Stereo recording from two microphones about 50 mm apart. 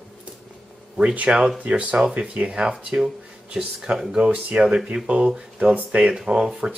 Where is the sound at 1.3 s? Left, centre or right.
Right.